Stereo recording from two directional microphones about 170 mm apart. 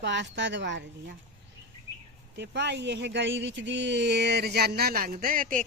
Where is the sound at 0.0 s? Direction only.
90° right.